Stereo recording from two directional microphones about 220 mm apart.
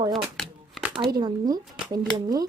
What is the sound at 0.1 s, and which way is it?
Shuffling cards, centre (ahead or behind).